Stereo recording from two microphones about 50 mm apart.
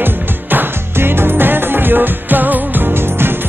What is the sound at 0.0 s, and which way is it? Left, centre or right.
Music, right.